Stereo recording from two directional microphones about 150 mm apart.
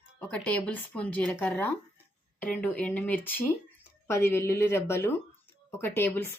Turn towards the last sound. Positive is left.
turn(degrees=15)  # may be behind; listen again after turning